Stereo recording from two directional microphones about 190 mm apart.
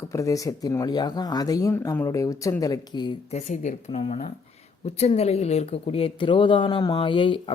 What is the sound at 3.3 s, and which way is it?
Speech, 40° left (ahead or behind).